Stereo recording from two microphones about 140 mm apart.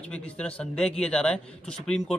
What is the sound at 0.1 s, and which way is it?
Speech, 10° left (ahead or behind).